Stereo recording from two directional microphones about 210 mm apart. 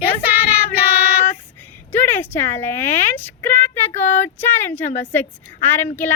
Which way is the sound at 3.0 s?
10° left (ahead or behind).